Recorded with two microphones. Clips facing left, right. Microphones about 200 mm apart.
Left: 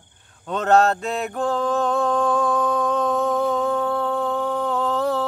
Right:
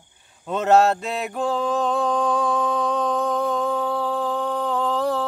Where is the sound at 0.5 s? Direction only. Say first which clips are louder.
Right 1 dB; 5° right (ahead or behind).